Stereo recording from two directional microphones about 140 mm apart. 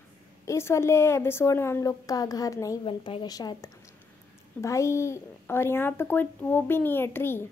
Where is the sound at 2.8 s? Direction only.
35° left (ahead or behind); by 7.5 s 15° left (ahead or behind).